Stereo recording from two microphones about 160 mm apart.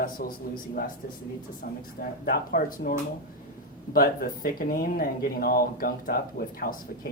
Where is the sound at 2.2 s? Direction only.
65° left (ahead or behind).